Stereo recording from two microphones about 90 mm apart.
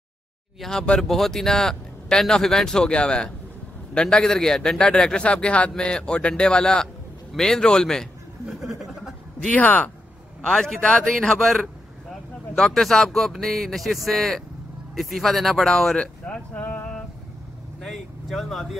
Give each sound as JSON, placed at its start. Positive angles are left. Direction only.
{"t": 0.6, "sound": "a man's voice", "side_deg": 5}
{"t": 8.5, "sound": "a sound", "side_deg": -5}
{"t": 9.5, "sound": "a man's voice", "side_deg": 15}
{"t": 10.4, "sound": "a man's voice", "side_deg": 5}
{"t": 17.8, "sound": "speech", "side_deg": 0}